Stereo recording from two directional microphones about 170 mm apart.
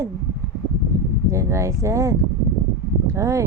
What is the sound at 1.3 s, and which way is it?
Speech, 15° right (ahead or behind).